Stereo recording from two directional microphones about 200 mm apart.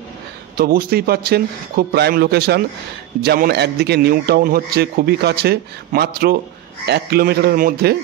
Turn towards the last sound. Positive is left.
turn(degrees=-50)  # may be behind; listen again after turning